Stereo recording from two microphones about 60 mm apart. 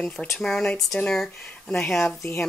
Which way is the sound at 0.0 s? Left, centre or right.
Centre.